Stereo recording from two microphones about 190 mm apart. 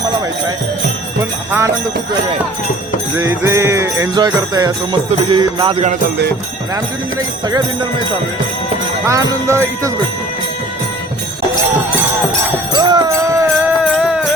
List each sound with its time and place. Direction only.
1.2 s jingle bell: 15° right (ahead or behind)
3.2 s jingle bell: 15° right (ahead or behind)
7.4 s jingle bell: 20° right (ahead or behind)
9.0 s jingle bell: 15° right (ahead or behind)
12.7 s jingle bell: 20° right (ahead or behind)
13.7 s music: 5° right (ahead or behind)